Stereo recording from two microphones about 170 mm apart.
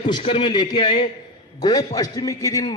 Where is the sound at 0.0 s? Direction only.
30° left (ahead or behind).